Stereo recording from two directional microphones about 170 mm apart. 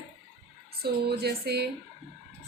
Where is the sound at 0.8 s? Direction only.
65° right (ahead or behind).